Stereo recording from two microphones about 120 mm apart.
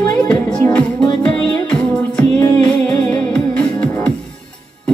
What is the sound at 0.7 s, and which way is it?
Music, 10° left (ahead or behind).